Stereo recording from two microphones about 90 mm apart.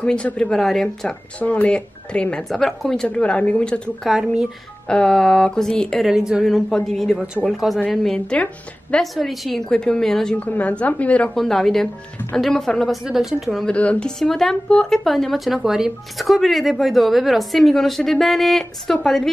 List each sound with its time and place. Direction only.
0.0 s speech: 15° left (ahead or behind)
1.4 s speech: 15° left (ahead or behind)
3.1 s speech: 15° left (ahead or behind)
4.1 s speech: 5° right (ahead or behind)
4.8 s speech: 10° left (ahead or behind)
6.0 s speech: 5° right (ahead or behind)
10.3 s speech: 15° left (ahead or behind)
11.3 s speech: 5° left (ahead or behind)
13.7 s speech: 15° left (ahead or behind)